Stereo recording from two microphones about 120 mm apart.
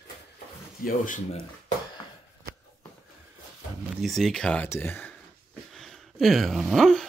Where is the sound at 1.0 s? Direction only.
90° left.